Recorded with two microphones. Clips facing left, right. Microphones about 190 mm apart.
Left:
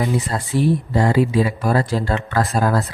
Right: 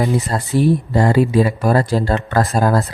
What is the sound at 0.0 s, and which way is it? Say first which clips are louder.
Speech: right 3 dB; 40° right (ahead or behind).